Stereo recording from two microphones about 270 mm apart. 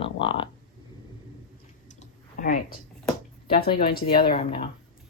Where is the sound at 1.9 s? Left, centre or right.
Left.